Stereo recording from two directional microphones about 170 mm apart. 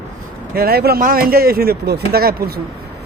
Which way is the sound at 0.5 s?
65° right (ahead or behind).